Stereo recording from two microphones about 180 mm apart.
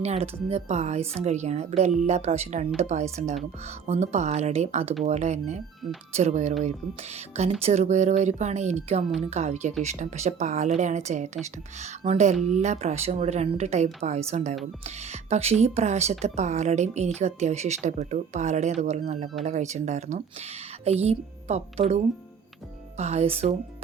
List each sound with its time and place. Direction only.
0.0 s speech: 35° right (ahead or behind)